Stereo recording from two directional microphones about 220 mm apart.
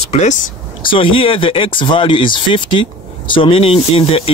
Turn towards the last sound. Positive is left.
turn(degrees=25)  # may be behind; listen again after turning